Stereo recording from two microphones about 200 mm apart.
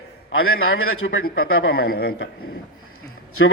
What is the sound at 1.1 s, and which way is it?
Speech, 90° left.